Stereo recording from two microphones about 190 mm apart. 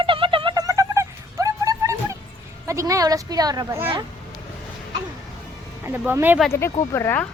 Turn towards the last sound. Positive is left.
turn(degrees=15)  # may be behind; listen again after turning